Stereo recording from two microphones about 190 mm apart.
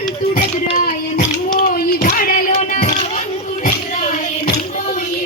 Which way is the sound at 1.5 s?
45° left (ahead or behind).